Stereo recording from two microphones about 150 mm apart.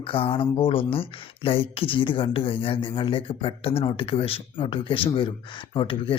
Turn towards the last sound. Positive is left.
turn(degrees=35)  # may be behind; listen again after turning